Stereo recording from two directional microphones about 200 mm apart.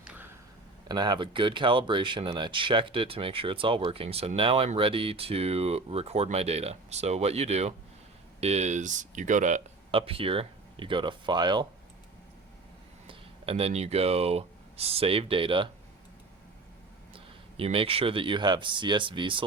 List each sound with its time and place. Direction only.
0.0 s a sound: 5° right (ahead or behind)
0.9 s speech: 20° right (ahead or behind)
13.1 s speech: 30° right (ahead or behind)
17.6 s speech: 30° right (ahead or behind)